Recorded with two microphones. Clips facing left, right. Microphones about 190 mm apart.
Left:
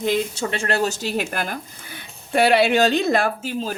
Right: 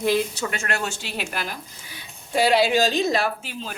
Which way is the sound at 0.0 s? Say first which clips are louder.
Even; 25° left (ahead or behind).